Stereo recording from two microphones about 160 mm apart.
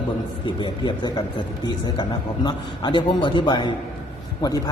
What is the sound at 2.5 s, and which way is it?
A man's voice, 30° left (ahead or behind).